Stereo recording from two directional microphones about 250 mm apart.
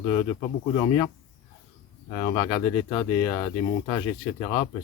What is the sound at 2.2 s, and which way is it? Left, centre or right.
Speech, centre.